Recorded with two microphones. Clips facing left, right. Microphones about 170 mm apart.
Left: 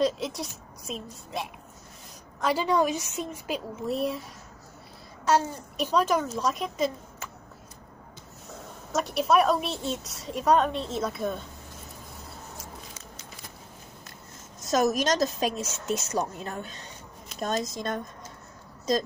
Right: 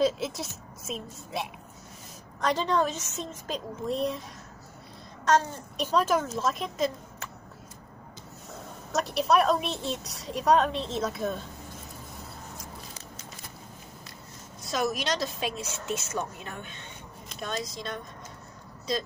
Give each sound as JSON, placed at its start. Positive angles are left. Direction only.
{"t": 0.0, "sound": "a woman's voice", "side_deg": 0}
{"t": 2.4, "sound": "a woman's voice", "side_deg": 10}
{"t": 5.2, "sound": "a woman's voice", "side_deg": 5}
{"t": 8.9, "sound": "a woman's voice", "side_deg": 0}
{"t": 14.6, "sound": "a woman's voice", "side_deg": 45}